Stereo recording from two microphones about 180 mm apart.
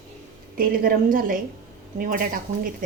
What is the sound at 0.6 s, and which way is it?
A woman's voice, 50° right (ahead or behind).